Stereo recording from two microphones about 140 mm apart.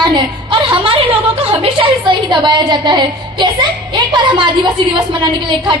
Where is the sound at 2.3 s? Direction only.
35° right (ahead or behind).